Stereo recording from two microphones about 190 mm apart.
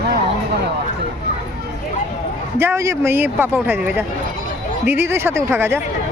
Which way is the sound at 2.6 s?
15° right (ahead or behind).